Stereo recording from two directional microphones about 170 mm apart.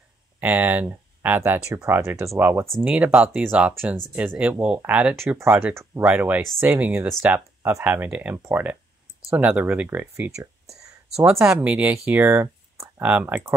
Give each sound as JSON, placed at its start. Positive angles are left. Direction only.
{"t": 0.4, "sound": "speech", "side_deg": -10}